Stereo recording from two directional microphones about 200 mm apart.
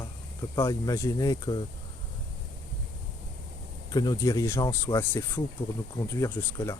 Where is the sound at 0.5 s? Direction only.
15° left (ahead or behind).